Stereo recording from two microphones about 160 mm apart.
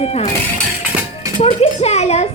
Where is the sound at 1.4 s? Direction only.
40° left (ahead or behind).